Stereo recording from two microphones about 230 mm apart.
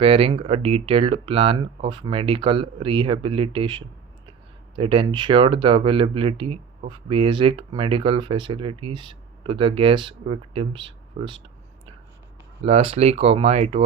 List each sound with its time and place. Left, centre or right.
0.0 s speech: right
12.6 s speech: right